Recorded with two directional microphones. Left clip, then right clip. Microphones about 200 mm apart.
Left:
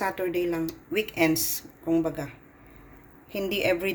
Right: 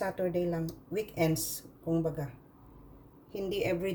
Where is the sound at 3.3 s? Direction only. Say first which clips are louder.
Left 6 dB; 20° left (ahead or behind).